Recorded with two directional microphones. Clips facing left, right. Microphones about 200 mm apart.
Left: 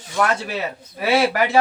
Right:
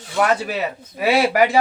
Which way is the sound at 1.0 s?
15° right (ahead or behind).